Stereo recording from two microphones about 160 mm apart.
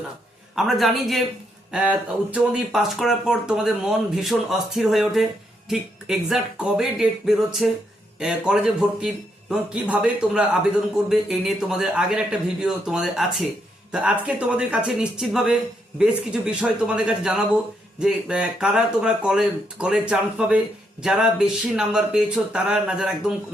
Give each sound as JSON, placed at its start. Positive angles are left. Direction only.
{"t": 0.5, "sound": "a man's voice", "side_deg": 0}